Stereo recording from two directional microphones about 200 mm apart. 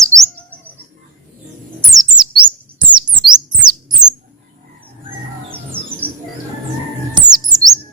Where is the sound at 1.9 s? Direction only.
20° right (ahead or behind).